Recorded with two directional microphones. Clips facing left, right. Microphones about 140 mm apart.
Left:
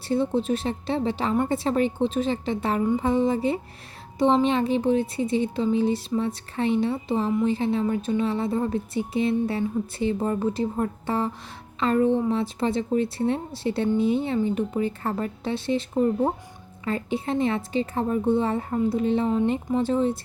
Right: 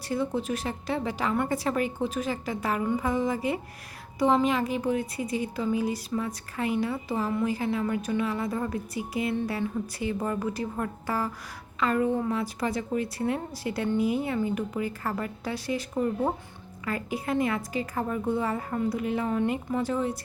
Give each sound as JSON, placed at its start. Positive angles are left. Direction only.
{"t": 0.1, "sound": "speech", "side_deg": 25}